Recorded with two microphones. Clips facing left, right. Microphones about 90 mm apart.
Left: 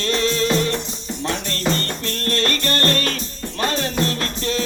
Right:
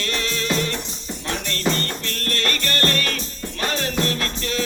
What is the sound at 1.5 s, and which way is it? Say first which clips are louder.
Music: right 2 dB; 35° left (ahead or behind).